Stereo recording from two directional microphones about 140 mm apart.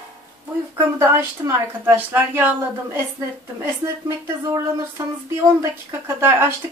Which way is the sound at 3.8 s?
20° right (ahead or behind).